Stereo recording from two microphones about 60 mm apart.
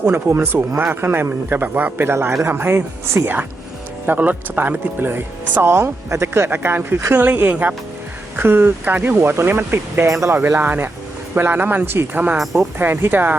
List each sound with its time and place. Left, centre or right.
0.0 s speech: right
2.1 s speech: right
8.4 s speech: right
10.1 s speech: right
10.6 s speech: right